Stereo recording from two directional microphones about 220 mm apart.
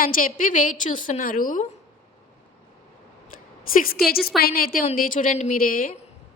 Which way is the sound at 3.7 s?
40° left (ahead or behind).